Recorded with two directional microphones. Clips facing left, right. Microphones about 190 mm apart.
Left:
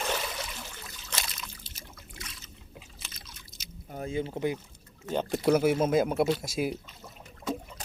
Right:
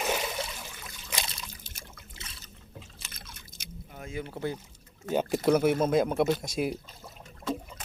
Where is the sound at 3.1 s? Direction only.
55° right (ahead or behind).